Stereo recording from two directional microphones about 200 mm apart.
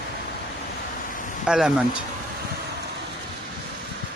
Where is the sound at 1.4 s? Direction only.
5° right (ahead or behind).